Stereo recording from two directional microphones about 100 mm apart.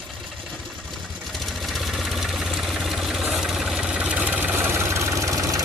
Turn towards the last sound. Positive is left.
turn(degrees=-35)  # may be behind; listen again after turning